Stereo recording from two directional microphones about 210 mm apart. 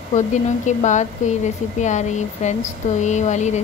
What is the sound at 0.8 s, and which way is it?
Speech, 35° left (ahead or behind).